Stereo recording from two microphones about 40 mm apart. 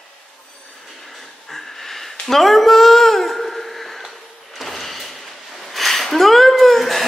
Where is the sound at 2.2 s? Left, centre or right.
Centre.